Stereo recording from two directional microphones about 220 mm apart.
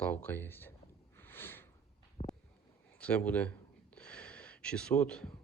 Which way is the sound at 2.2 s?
30° left (ahead or behind).